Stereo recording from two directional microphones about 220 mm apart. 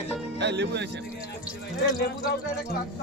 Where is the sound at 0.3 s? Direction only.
50° right (ahead or behind).